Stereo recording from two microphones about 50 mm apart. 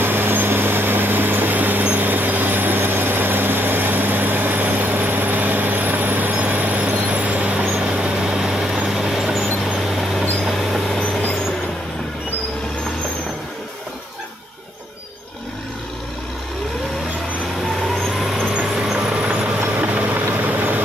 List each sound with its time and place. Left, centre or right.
0.0 s vehicle: right; by 10.8 s centre
17.7 s vehicle: centre
18.5 s vehicle: centre; by 20.8 s right